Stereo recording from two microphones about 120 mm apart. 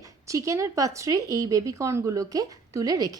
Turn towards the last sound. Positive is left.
turn(degrees=-30)  # may be behind; listen again after turning